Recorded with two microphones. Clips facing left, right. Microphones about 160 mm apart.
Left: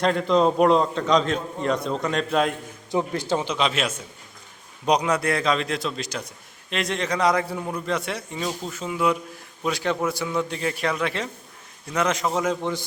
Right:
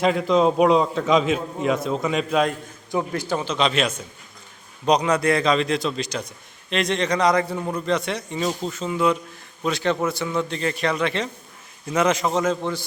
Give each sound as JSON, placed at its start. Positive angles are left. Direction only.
{"t": 0.0, "sound": "a man's voice", "side_deg": -5}
{"t": 2.9, "sound": "a man's voice", "side_deg": 25}
{"t": 3.5, "sound": "a man's voice", "side_deg": 5}